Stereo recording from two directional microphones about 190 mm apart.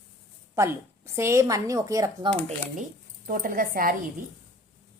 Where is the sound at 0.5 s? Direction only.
15° right (ahead or behind).